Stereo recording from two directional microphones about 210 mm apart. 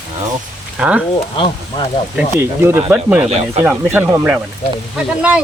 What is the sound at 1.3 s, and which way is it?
Speech, 25° left (ahead or behind).